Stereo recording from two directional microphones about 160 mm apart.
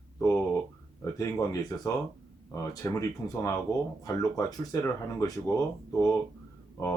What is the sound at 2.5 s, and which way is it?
Speech, 20° left (ahead or behind).